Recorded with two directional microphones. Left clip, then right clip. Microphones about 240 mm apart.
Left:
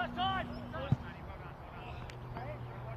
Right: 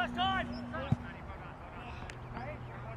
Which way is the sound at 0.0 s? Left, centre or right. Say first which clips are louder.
Right 2 dB; right.